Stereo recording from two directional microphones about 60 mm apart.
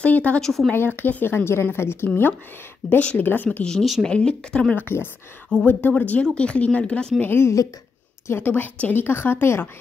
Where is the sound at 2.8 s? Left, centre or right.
Left.